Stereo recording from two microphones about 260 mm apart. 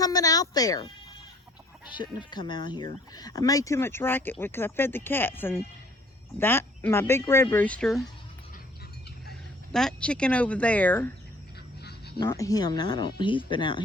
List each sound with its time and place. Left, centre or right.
0.0 s speech: centre
2.0 s speech: centre
9.7 s speech: centre
11.8 s a sound: left
12.2 s speech: centre